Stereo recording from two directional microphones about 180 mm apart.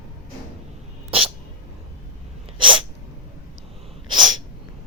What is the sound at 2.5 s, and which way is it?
Sneeze, 25° right (ahead or behind).